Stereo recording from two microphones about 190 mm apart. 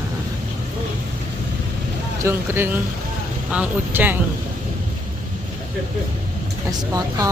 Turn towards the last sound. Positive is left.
turn(degrees=-20)  # may be behind; listen again after turning